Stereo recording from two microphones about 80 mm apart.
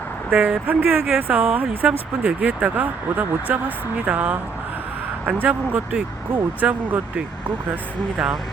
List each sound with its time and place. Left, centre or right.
0.3 s speech: right